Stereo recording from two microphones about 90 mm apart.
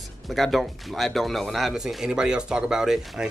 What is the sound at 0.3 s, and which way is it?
Speech, centre (ahead or behind).